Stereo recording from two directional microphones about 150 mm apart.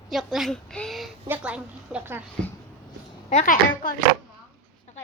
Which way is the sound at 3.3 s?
60° left (ahead or behind).